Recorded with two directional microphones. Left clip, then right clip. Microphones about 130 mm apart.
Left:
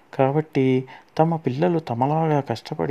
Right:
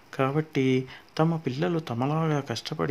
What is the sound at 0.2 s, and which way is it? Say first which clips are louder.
Speech: left 6 dB; 40° left (ahead or behind).